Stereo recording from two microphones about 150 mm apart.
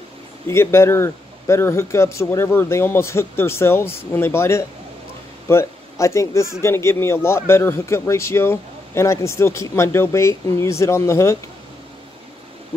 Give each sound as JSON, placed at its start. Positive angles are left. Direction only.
{"t": 0.5, "sound": "a man's voice", "side_deg": 15}